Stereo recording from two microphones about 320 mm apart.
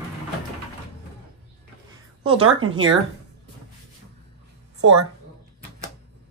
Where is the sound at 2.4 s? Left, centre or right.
Right.